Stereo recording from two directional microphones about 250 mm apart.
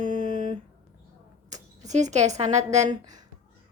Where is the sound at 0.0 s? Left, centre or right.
Right.